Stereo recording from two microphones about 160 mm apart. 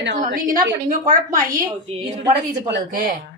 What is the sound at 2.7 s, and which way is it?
Speech, 65° right (ahead or behind).